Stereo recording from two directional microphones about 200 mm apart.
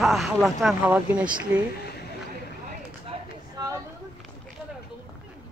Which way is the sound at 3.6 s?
20° right (ahead or behind).